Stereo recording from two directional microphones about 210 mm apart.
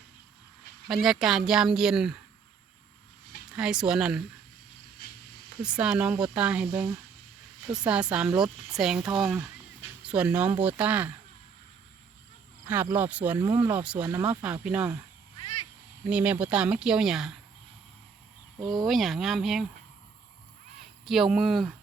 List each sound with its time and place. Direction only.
0.9 s speech: centre (ahead or behind)
3.5 s speech: 5° right (ahead or behind)
5.6 s speech: 5° right (ahead or behind)
7.7 s speech: 5° right (ahead or behind)
12.6 s speech: 10° right (ahead or behind)
16.0 s speech: 5° right (ahead or behind)
18.6 s speech: 20° right (ahead or behind)
18.9 s speech: centre (ahead or behind)
21.0 s speech: centre (ahead or behind)